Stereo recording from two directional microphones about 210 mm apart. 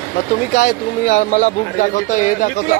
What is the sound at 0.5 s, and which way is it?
Speech, 40° left (ahead or behind).